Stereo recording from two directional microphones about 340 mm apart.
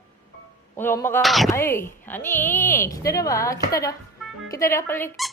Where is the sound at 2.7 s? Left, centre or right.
Centre.